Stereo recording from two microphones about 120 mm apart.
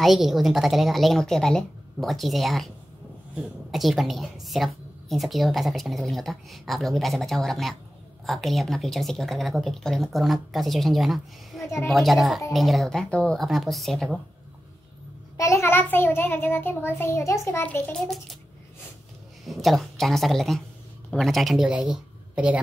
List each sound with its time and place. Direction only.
0.0 s speech: centre (ahead or behind)
11.6 s a child's voice: 25° left (ahead or behind)
11.9 s speech: centre (ahead or behind)
15.3 s a child's voice: 25° left (ahead or behind)
17.9 s speech: centre (ahead or behind)
19.4 s speech: centre (ahead or behind)